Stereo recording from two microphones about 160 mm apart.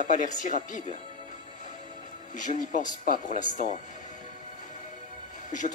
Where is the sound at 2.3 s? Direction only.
55° left (ahead or behind).